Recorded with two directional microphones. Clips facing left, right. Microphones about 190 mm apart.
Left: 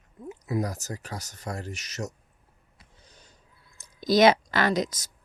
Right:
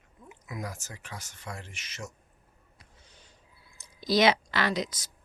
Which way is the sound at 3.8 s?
45° left (ahead or behind).